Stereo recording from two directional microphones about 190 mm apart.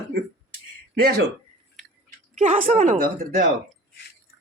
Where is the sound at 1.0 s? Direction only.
60° right (ahead or behind).